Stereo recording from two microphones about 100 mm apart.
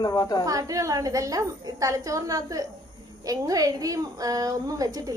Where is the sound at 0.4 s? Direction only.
35° right (ahead or behind).